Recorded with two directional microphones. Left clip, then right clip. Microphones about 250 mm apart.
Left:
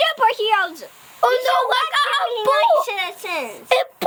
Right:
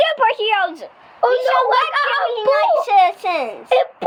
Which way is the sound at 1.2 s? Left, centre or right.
Left.